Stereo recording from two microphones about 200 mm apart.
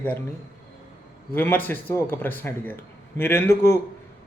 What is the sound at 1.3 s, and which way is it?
A man's voice, 10° left (ahead or behind).